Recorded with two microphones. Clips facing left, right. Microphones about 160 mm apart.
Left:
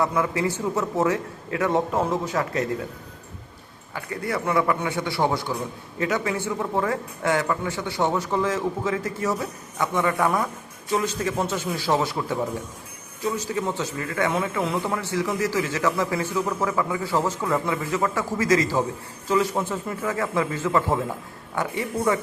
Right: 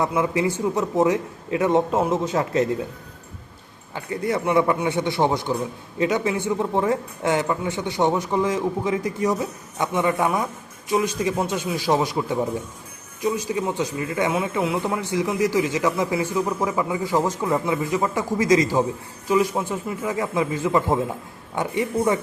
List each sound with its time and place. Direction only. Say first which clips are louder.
0.0 s a man's voice: right 2 dB; 20° right (ahead or behind)
3.9 s a man's voice: right 4 dB; 20° right (ahead or behind)